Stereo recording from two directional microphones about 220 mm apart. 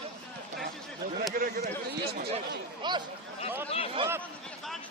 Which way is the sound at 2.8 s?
20° right (ahead or behind).